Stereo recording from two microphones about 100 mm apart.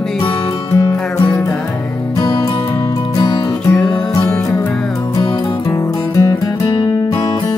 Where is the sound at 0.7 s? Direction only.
35° left (ahead or behind).